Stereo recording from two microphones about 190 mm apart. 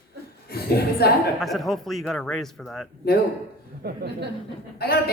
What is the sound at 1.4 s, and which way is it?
A man's voice, centre (ahead or behind).